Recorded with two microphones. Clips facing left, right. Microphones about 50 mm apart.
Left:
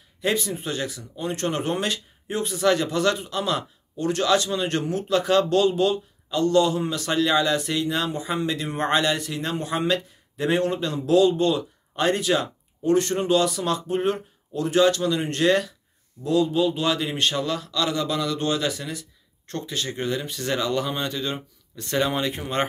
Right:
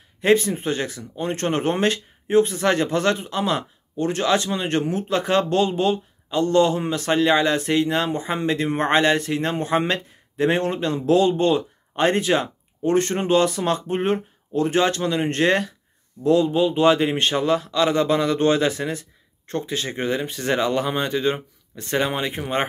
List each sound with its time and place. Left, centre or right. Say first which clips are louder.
0.2 s a man's voice: right 7 dB; right; by 22.7 s centre